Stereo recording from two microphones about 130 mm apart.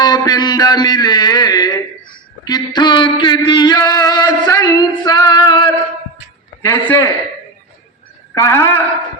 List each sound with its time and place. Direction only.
0.0 s a sound: 30° left (ahead or behind)
6.7 s a woman's voice: 20° left (ahead or behind)
8.4 s a woman's voice: 20° left (ahead or behind)